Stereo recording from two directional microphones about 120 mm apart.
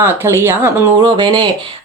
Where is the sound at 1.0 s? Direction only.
45° right (ahead or behind).